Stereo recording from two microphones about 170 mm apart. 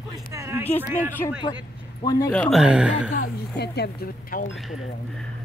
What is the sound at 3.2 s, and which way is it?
A woman's voice, 70° left (ahead or behind).